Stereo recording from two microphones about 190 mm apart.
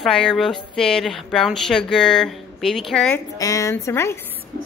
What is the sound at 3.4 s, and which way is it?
Speech, 15° left (ahead or behind).